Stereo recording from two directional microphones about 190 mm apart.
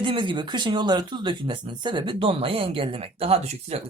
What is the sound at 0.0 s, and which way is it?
Speech, 25° right (ahead or behind).